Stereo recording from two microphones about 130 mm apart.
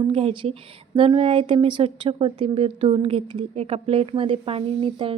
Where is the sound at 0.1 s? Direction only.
50° right (ahead or behind).